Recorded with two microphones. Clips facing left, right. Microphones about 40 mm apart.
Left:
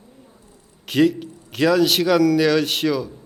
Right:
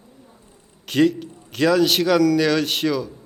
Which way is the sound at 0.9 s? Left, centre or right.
Centre.